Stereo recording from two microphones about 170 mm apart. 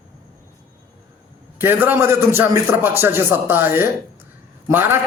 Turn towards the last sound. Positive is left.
turn(degrees=-15)  # may be behind; listen again after turning